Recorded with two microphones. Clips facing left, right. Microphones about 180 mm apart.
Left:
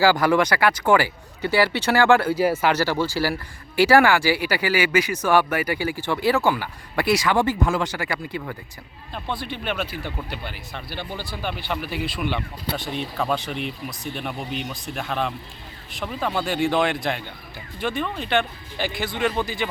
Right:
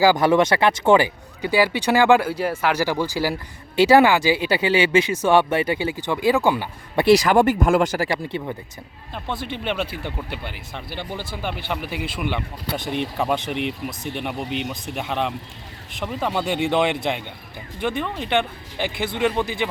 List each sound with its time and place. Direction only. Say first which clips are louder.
0.0 s speech: right 2 dB; 20° right (ahead or behind)
2.4 s speech: left 2 dB; 5° left (ahead or behind)
2.7 s speech: even; 15° right (ahead or behind)
7.2 s speech: right 4 dB; 45° right (ahead or behind)
8.1 s speech: right 3 dB; 20° right (ahead or behind)